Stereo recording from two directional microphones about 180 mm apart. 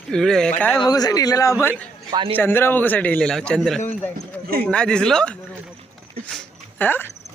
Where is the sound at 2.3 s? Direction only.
10° left (ahead or behind).